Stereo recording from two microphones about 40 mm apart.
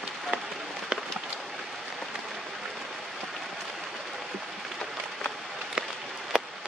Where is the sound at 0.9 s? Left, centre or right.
Centre.